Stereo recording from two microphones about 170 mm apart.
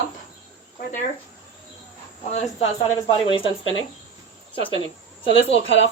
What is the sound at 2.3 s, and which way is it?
Speech, 40° left (ahead or behind).